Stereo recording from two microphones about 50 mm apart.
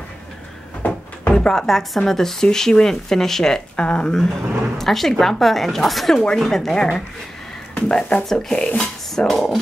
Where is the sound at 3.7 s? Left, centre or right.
Left.